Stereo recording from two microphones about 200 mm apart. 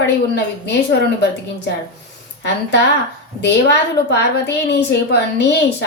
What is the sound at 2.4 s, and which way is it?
A woman's voice, 60° left (ahead or behind).